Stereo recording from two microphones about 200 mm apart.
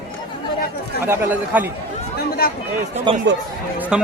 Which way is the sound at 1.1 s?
10° right (ahead or behind).